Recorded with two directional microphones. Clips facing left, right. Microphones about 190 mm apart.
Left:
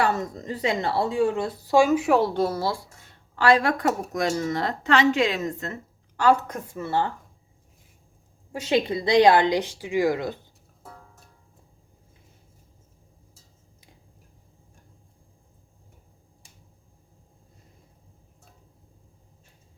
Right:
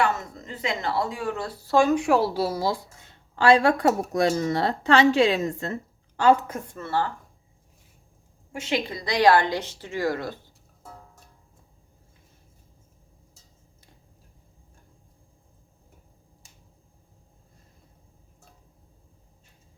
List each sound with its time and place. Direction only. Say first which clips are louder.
0.2 s speech: left 5 dB; 35° left (ahead or behind); by 2.9 s 15° right (ahead or behind)
3.3 s speech: right 2 dB; 25° right (ahead or behind)
6.5 s speech: even; centre (ahead or behind)
6.7 s speech: left 2 dB; 15° left (ahead or behind)
8.6 s speech: left 5 dB; 25° left (ahead or behind)